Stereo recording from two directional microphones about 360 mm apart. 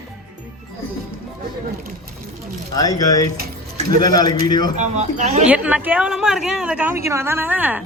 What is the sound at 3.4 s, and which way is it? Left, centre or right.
Keys jangling, right.